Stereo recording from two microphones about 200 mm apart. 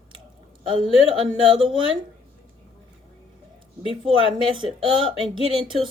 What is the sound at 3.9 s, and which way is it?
Speech, 25° right (ahead or behind).